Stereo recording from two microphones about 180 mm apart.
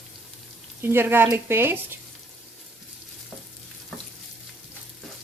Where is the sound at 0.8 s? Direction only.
15° right (ahead or behind).